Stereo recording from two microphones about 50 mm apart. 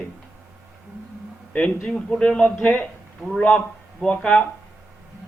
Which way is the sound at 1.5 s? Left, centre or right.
Centre.